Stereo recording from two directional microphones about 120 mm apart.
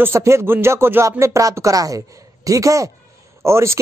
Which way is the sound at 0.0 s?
25° right (ahead or behind).